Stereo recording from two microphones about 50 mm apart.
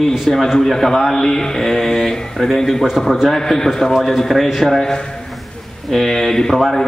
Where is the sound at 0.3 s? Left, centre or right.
Centre.